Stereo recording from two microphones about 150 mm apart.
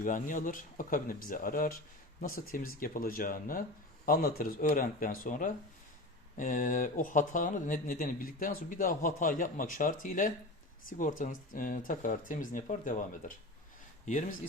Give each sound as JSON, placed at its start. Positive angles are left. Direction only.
{"t": 0.0, "sound": "speech", "side_deg": 60}